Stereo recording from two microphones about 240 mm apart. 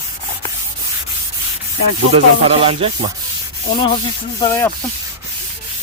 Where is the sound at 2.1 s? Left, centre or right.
Right.